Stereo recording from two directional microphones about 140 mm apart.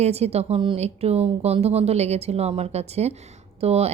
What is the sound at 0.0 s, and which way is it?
A woman's voice, 50° right (ahead or behind).